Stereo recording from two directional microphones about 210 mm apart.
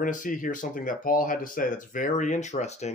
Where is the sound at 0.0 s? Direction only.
40° left (ahead or behind).